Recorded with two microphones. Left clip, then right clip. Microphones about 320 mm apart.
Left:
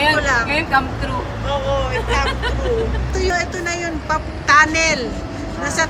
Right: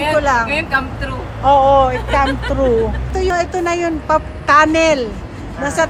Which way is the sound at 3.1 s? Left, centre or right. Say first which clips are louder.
Right 3 dB; centre.